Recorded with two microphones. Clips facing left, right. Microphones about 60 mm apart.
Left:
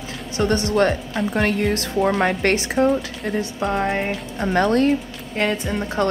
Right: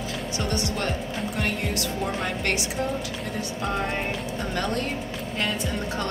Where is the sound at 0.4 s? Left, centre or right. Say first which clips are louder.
Left 11 dB; left.